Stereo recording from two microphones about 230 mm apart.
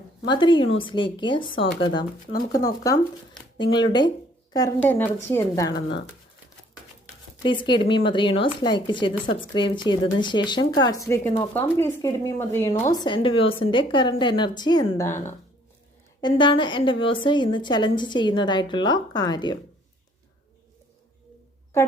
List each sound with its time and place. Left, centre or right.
0.3 s a woman's voice: centre
7.4 s a woman's voice: left
16.2 s a woman's voice: left